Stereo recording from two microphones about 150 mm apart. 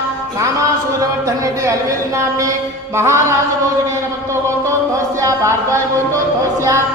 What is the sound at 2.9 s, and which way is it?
Speech, 20° right (ahead or behind).